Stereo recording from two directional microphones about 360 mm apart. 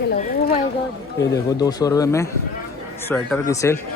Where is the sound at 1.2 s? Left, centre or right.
Centre.